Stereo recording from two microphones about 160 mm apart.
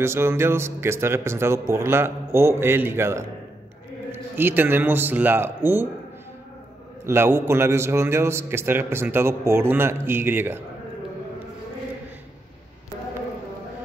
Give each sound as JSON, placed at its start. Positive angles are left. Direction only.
{"t": 0.0, "sound": "a man's voice", "side_deg": -15}
{"t": 7.1, "sound": "a man's voice", "side_deg": -15}